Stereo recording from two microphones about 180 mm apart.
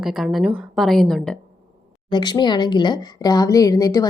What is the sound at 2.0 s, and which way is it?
A woman's voice, 25° left (ahead or behind).